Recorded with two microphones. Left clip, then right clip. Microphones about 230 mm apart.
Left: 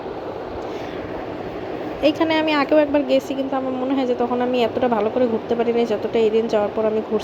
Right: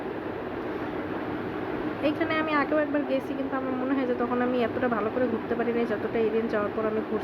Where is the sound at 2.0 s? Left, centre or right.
Left.